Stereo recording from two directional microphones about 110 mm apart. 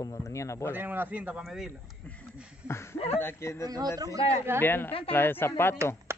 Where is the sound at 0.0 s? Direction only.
30° left (ahead or behind).